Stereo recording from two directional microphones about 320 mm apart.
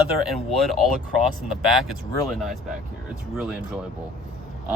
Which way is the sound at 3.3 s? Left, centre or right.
Centre.